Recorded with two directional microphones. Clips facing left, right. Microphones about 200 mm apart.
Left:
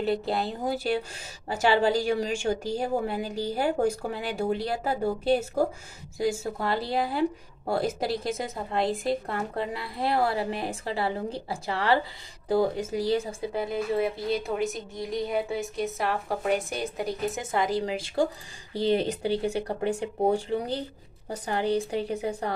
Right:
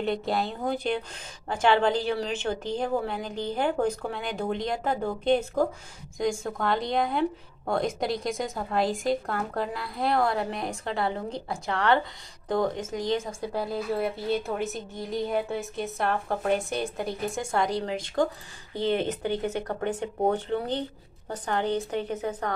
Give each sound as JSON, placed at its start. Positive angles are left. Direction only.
{"t": 0.0, "sound": "a woman's voice", "side_deg": 0}
{"t": 1.5, "sound": "a woman's voice", "side_deg": 5}
{"t": 18.7, "sound": "speech", "side_deg": 35}
{"t": 19.3, "sound": "a woman's voice", "side_deg": 10}